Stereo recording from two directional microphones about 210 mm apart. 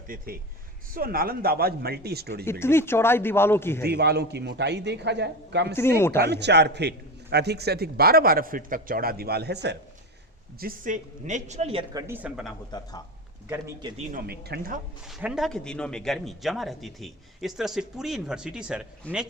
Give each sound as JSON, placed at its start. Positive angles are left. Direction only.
{"t": 0.9, "sound": "a man's voice", "side_deg": -45}
{"t": 2.4, "sound": "a man's voice", "side_deg": 10}
{"t": 3.8, "sound": "a man's voice", "side_deg": -50}
{"t": 5.7, "sound": "a man's voice", "side_deg": 10}
{"t": 6.1, "sound": "a man's voice", "side_deg": -50}
{"t": 10.6, "sound": "speech", "side_deg": -40}
{"t": 12.0, "sound": "speech", "side_deg": -10}
{"t": 14.3, "sound": "a man's voice", "side_deg": -50}
{"t": 15.0, "sound": "speech", "side_deg": -5}